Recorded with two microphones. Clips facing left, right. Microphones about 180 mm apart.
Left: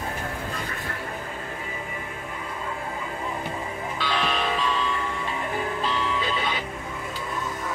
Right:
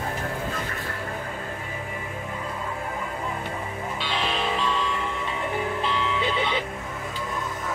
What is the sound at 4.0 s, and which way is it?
Music, 25° right (ahead or behind).